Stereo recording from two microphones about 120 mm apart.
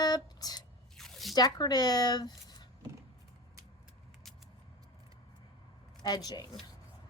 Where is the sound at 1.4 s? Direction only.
35° left (ahead or behind).